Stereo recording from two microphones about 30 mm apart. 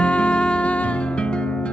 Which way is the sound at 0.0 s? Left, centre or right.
Left.